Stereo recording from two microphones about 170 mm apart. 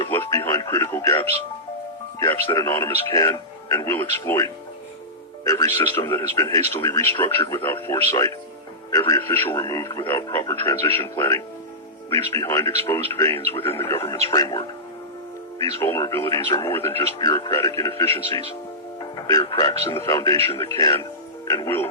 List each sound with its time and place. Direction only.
0.0 s music: 20° left (ahead or behind)
2.1 s speech: 20° left (ahead or behind)
5.5 s speech: 20° left (ahead or behind)
15.8 s speech: 15° left (ahead or behind)
20.3 s speech: 35° right (ahead or behind)
20.7 s speech: 20° left (ahead or behind)